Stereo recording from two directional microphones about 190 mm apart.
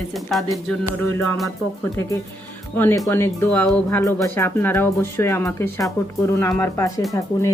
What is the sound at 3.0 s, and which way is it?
Speech, 10° left (ahead or behind).